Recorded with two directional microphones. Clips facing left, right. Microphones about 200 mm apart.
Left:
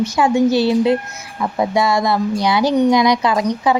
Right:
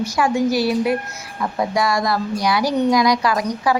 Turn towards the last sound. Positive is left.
turn(degrees=25)  # may be behind; listen again after turning